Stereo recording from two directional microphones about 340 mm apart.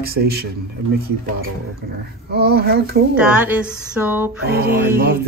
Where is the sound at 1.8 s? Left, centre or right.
Right.